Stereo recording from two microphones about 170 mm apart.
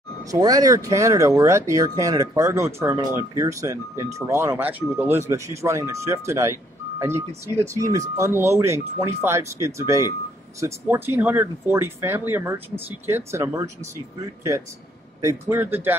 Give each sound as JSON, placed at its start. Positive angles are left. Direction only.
{"t": 0.3, "sound": "speech", "side_deg": -20}
{"t": 15.2, "sound": "speech", "side_deg": -15}